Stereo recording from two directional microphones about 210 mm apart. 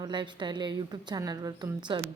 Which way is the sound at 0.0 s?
20° right (ahead or behind).